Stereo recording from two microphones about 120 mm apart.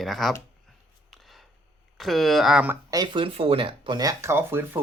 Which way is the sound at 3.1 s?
50° right (ahead or behind).